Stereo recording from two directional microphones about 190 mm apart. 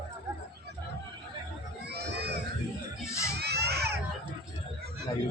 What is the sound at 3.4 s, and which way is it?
Crowd, 60° right (ahead or behind).